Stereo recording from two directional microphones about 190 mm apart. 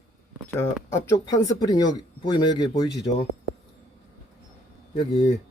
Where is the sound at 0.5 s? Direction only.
15° left (ahead or behind).